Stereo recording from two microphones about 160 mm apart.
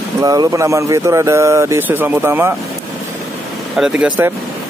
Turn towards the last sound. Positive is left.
turn(degrees=-10)  # may be behind; listen again after turning